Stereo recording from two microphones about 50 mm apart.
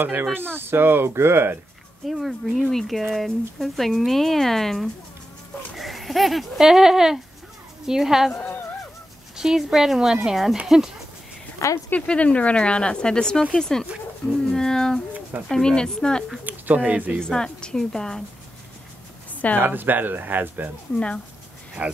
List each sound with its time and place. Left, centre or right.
0.0 s speech: right
2.0 s speech: centre
8.3 s speech: left
9.4 s speech: centre
11.6 s speech: left
12.1 s a woman's voice: left
14.5 s a sound: centre
15.4 s a woman's voice: centre
16.4 s speech: right
17.2 s a woman's voice: centre
19.6 s speech: right
21.8 s speech: right